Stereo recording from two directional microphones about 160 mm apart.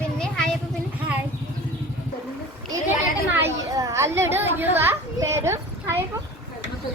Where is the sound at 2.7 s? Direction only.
15° right (ahead or behind).